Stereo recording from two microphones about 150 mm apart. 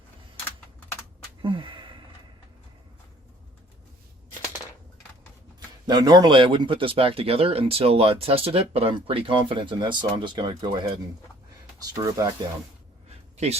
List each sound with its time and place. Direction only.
1.4 s a sound: 35° right (ahead or behind)
5.5 s speech: 30° right (ahead or behind)
13.3 s speech: 45° right (ahead or behind)